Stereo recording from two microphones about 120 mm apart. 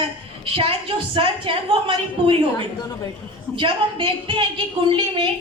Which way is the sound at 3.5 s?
45° right (ahead or behind).